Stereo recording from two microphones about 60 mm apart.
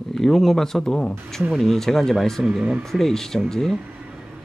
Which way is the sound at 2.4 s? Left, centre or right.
Centre.